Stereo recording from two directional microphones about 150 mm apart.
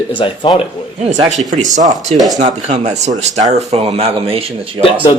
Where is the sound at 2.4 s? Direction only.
50° right (ahead or behind).